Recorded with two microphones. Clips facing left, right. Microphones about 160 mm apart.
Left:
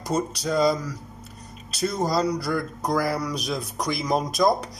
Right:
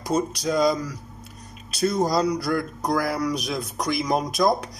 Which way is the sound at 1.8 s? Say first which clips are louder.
Right 2 dB; 5° right (ahead or behind).